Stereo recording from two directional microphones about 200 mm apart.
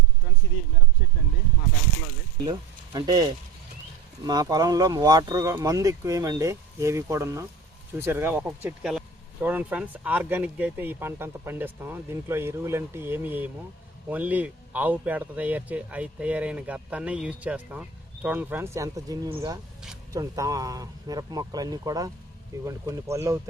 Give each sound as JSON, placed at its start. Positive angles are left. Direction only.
{"t": 2.4, "sound": "speech", "side_deg": -20}